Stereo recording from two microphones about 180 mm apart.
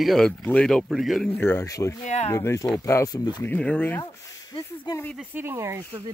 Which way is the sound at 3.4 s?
10° left (ahead or behind).